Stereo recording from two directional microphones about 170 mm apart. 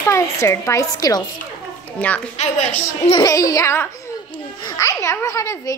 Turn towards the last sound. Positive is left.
turn(degrees=20)  # may be behind; listen again after turning